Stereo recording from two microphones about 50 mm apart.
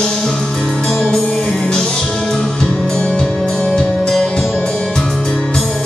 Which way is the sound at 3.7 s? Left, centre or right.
Centre.